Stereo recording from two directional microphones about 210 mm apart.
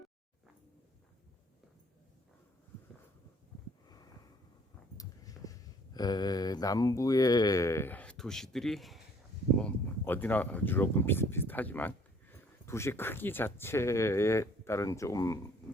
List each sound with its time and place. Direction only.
4.9 s speech: 15° left (ahead or behind)